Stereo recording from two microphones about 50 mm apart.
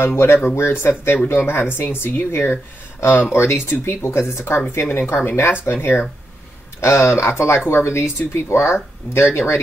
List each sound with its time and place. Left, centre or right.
0.0 s speech: left
6.8 s speech: left